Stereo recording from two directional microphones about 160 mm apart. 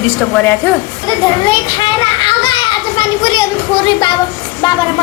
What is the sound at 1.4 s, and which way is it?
Children playing, 30° left (ahead or behind).